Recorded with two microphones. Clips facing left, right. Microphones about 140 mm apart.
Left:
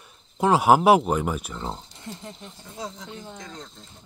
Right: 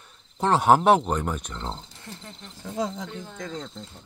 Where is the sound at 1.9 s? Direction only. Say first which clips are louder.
Left 4 dB; 20° left (ahead or behind).